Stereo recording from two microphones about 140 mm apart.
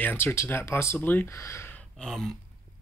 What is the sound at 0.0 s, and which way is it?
Speech, 15° left (ahead or behind).